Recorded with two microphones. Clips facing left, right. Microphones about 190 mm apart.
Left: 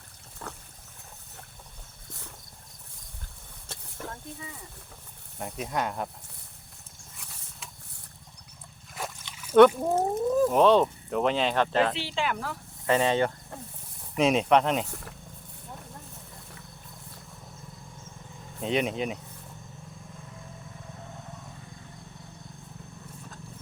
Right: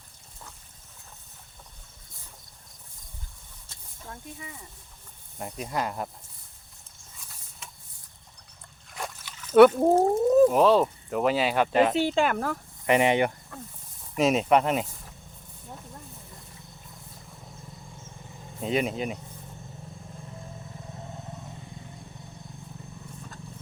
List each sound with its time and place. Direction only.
0.4 s a sound: 70° left (ahead or behind)
3.7 s vehicle: 70° left (ahead or behind)
5.4 s speech: centre (ahead or behind)
7.6 s vehicle: centre (ahead or behind)
9.0 s dog: 5° left (ahead or behind)
9.3 s a sound: 10° left (ahead or behind)
9.8 s speech: 30° right (ahead or behind)
10.5 s speech: 5° right (ahead or behind)
11.9 s speech: 45° right (ahead or behind)
12.9 s speech: 15° right (ahead or behind)
14.2 s speech: centre (ahead or behind)
18.6 s speech: centre (ahead or behind)